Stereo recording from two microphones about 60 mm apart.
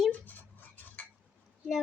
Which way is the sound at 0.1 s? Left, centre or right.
Left.